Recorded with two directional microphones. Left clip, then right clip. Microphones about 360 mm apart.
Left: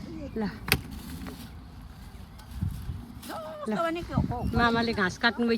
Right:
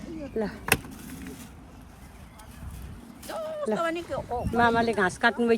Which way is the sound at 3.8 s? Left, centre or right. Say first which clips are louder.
Right 1 dB; left.